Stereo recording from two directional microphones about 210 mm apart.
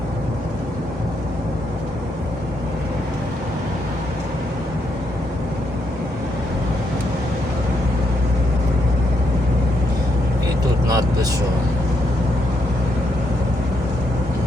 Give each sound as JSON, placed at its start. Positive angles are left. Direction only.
{"t": 10.8, "sound": "vehicle", "side_deg": -15}